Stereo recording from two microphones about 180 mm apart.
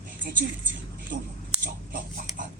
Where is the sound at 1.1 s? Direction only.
50° right (ahead or behind).